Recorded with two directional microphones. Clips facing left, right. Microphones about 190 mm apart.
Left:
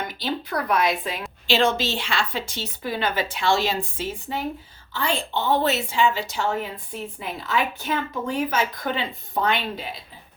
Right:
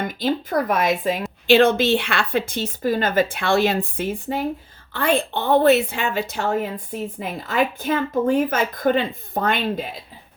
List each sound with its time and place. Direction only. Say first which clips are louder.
0.0 s a woman's voice: right 6 dB; 50° right (ahead or behind)